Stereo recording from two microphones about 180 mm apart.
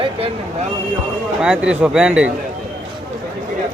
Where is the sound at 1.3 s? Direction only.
5° right (ahead or behind).